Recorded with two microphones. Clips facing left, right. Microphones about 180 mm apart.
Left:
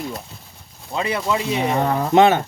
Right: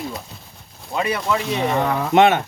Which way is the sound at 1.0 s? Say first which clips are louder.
Even; 25° left (ahead or behind).